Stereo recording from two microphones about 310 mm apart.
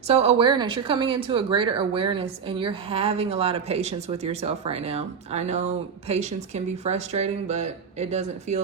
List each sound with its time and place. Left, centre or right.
0.1 s a woman's voice: centre